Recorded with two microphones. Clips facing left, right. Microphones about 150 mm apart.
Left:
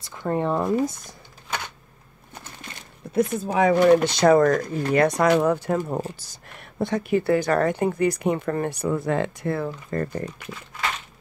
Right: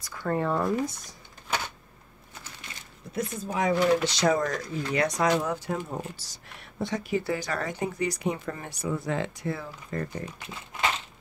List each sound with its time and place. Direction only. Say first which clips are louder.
0.0 s speech: left 3 dB; 20° left (ahead or behind)
3.2 s a woman's voice: left 8 dB; 65° left (ahead or behind)